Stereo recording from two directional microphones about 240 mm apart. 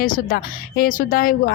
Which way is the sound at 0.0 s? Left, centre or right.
Left.